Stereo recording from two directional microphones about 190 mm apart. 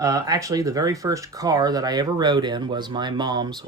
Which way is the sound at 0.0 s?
20° right (ahead or behind).